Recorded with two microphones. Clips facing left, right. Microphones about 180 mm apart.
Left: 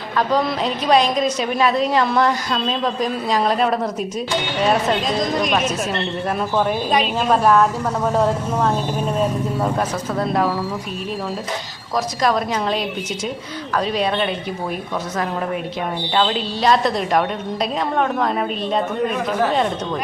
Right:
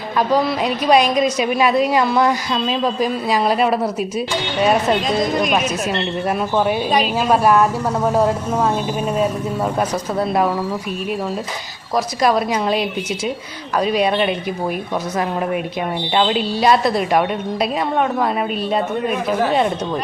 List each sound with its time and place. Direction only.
0.2 s a woman's voice: 10° right (ahead or behind)
11.9 s a woman's voice: 10° right (ahead or behind)
16.1 s a woman's voice: 15° right (ahead or behind)